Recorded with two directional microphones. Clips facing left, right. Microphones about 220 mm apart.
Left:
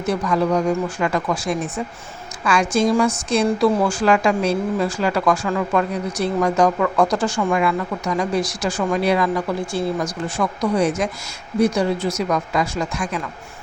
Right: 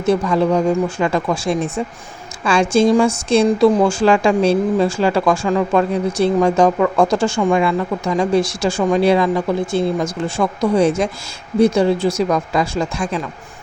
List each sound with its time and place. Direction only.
0.0 s speech: 25° right (ahead or behind)